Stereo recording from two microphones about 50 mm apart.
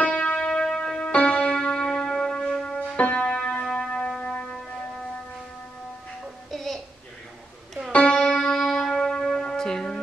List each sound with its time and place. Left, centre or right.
0.0 s church bell: left
0.5 s music: centre
6.5 s a sound: centre
8.1 s music: centre